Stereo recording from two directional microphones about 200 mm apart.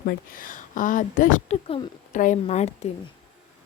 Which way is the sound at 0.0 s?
50° left (ahead or behind).